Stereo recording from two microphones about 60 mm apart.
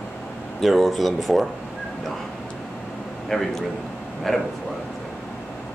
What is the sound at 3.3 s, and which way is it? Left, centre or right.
Speech, centre.